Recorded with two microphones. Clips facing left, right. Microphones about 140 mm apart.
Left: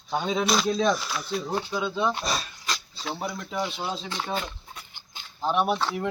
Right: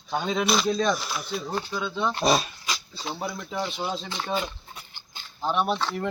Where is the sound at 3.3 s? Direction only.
Centre (ahead or behind).